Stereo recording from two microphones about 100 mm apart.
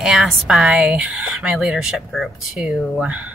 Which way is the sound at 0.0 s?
5° right (ahead or behind).